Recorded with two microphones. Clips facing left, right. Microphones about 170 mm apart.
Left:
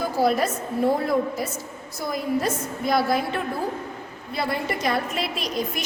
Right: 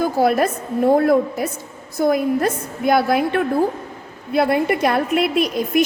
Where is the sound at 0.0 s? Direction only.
55° right (ahead or behind).